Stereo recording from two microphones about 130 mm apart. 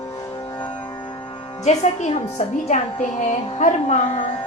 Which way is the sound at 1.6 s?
60° left (ahead or behind).